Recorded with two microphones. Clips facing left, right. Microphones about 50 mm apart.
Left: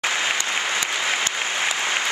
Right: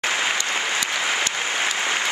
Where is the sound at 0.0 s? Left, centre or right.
Centre.